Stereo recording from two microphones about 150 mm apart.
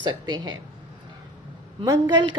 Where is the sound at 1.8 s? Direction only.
30° right (ahead or behind).